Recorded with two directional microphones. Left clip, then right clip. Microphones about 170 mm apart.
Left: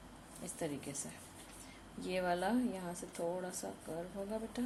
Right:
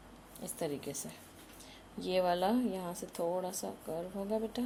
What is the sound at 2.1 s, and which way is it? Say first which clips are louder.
Speech: right 5 dB; 20° right (ahead or behind).